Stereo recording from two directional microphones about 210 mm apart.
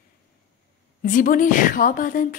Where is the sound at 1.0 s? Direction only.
40° left (ahead or behind).